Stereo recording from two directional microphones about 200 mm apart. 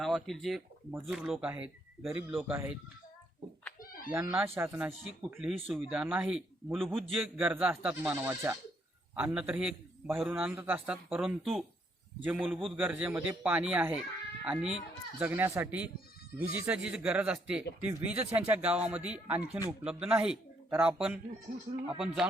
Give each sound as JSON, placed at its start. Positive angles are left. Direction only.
{"t": 0.0, "sound": "a man's voice", "side_deg": 0}
{"t": 3.8, "sound": "chicken", "side_deg": 45}
{"t": 4.1, "sound": "a man's voice", "side_deg": -10}